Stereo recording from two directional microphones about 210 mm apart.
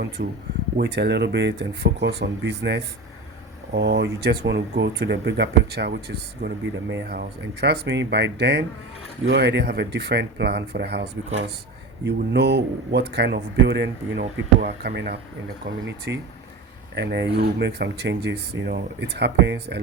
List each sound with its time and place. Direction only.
0.2 s speech: 45° right (ahead or behind)